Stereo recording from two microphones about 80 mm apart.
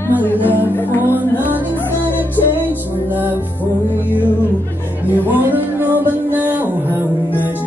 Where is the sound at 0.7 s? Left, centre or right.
Left.